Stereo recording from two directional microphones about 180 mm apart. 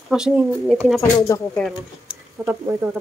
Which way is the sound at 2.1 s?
10° right (ahead or behind).